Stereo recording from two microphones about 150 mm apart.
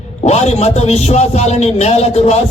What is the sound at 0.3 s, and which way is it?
A man's voice, 45° left (ahead or behind).